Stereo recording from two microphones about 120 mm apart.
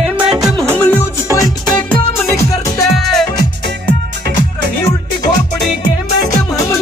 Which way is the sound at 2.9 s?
Centre (ahead or behind).